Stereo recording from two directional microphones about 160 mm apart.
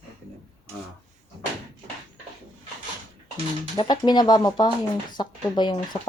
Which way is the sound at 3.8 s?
25° left (ahead or behind).